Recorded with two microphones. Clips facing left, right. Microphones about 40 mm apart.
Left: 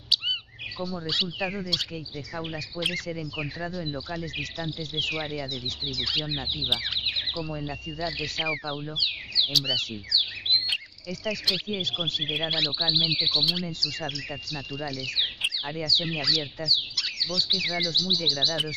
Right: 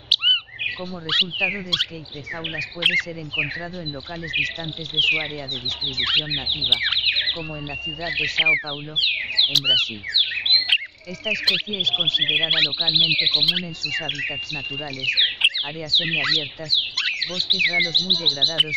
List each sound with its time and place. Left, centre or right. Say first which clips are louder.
0.1 s bird: right 8 dB; right
1.1 s speech: right 9 dB; right
2.8 s speech: right 8 dB; right
5.9 s speech: right 8 dB; right
15.1 s bird: right 9 dB; right
16.0 s speech: right 6 dB; right